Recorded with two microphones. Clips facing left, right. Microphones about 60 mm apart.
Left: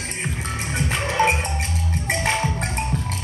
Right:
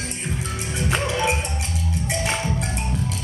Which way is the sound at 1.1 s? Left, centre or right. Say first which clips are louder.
Left 7 dB; left.